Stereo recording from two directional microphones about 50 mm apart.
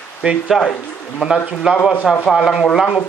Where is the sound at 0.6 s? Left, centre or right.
Left.